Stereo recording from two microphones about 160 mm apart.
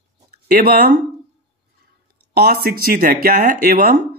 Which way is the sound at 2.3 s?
80° right.